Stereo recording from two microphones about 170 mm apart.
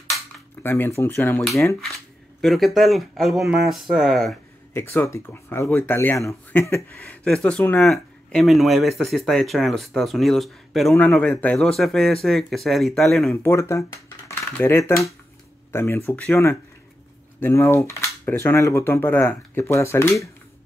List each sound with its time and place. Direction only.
0.6 s speech: 15° left (ahead or behind)
2.4 s speech: centre (ahead or behind)
4.7 s speech: 15° left (ahead or behind)
13.3 s speech: 15° left (ahead or behind)